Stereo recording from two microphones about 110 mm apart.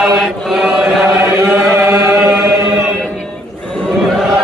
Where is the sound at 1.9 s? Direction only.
20° right (ahead or behind).